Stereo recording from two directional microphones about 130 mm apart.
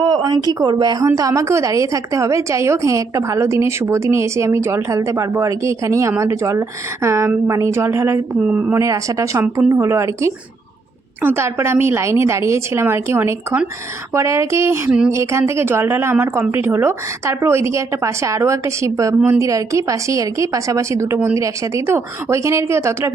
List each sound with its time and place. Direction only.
0.0 s a woman's voice: 35° right (ahead or behind); by 8.8 s 10° right (ahead or behind)
8.8 s a woman's voice: 25° right (ahead or behind)